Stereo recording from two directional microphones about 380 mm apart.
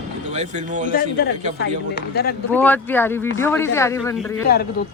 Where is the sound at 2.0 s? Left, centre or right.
Left.